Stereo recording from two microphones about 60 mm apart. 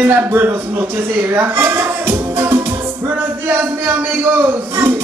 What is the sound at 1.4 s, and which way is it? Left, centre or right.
Music, right.